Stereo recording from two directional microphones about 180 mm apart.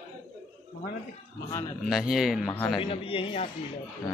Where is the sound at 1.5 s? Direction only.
15° left (ahead or behind).